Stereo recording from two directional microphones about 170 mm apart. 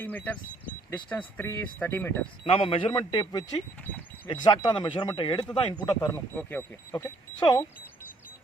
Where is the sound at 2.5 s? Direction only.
35° left (ahead or behind).